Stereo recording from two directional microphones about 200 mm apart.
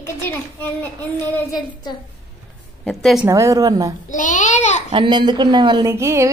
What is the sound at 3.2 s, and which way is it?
Speech, 15° right (ahead or behind).